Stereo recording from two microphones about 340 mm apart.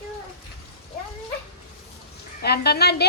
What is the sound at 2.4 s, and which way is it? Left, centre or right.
Speech, left.